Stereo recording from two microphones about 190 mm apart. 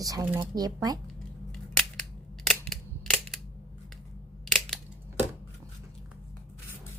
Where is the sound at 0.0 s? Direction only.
15° right (ahead or behind).